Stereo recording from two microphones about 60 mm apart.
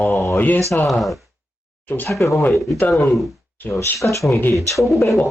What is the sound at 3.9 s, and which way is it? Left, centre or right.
Speech, left.